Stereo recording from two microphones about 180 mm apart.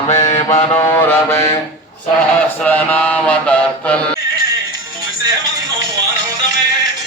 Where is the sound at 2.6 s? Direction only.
10° left (ahead or behind).